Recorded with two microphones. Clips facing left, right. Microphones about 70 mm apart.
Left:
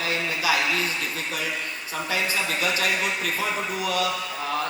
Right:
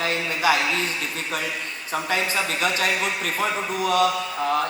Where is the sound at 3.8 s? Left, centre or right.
Right.